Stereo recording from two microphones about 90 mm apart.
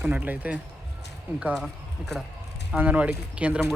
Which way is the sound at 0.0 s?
20° right (ahead or behind).